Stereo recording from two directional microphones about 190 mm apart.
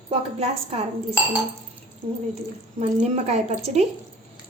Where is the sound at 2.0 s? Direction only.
30° right (ahead or behind).